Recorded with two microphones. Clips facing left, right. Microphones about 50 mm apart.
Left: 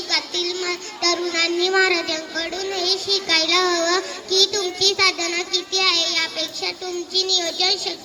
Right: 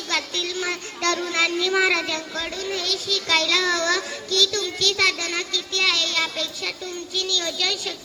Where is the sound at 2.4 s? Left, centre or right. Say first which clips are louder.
Left 3 dB; centre.